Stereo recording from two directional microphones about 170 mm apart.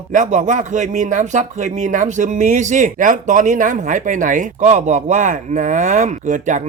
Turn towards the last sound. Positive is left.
turn(degrees=-45)  # may be behind; listen again after turning